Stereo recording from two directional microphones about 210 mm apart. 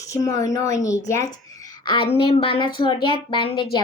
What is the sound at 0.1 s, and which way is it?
Speech, 15° left (ahead or behind).